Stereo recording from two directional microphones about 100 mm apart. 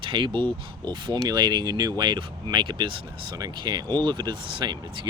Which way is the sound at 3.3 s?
45° right (ahead or behind).